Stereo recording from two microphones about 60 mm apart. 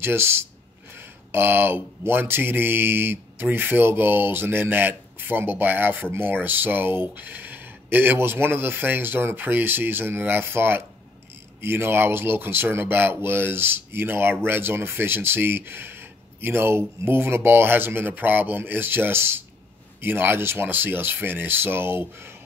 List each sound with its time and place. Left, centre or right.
0.0 s speech: right